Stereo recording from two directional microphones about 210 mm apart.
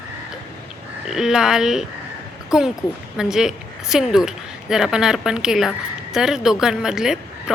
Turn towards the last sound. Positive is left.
turn(degrees=-5)  # may be behind; listen again after turning